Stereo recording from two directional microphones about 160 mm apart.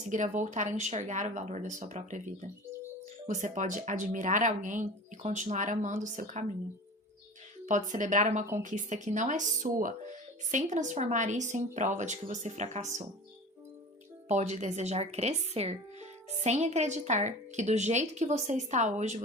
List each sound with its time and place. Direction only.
0.1 s speech: 50° right (ahead or behind)
7.7 s speech: 50° right (ahead or behind)
14.3 s speech: 45° right (ahead or behind)